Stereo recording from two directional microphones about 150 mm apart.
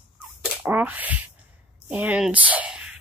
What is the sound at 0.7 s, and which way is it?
Speech, 10° right (ahead or behind).